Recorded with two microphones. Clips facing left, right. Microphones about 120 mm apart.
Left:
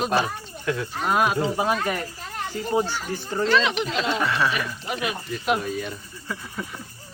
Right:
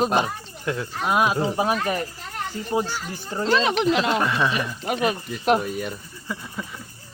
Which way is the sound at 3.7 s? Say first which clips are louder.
Right 5 dB; 65° right (ahead or behind).